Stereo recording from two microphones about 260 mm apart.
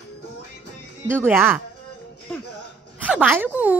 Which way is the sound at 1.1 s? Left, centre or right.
Centre.